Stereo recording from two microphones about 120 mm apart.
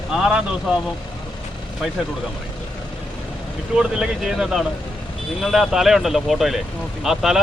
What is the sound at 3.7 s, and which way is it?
Speech, 5° right (ahead or behind).